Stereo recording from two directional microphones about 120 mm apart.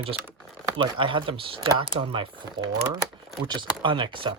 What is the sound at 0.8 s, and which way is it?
Speech, 45° right (ahead or behind).